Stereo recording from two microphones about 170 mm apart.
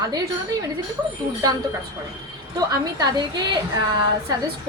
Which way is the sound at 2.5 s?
25° right (ahead or behind).